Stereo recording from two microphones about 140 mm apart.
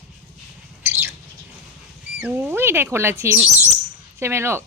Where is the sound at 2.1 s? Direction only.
15° right (ahead or behind).